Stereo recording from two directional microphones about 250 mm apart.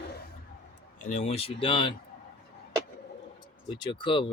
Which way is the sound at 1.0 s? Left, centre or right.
Left.